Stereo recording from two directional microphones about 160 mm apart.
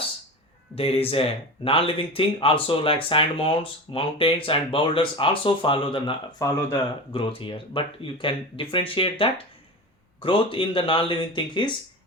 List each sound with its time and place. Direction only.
0.8 s speech: 35° left (ahead or behind)